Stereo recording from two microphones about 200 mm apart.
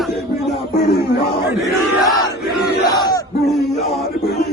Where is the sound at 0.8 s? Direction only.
55° left (ahead or behind).